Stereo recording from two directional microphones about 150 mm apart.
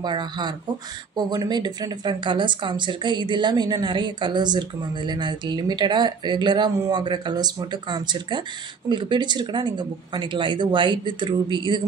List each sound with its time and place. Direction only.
0.0 s speech: 30° right (ahead or behind)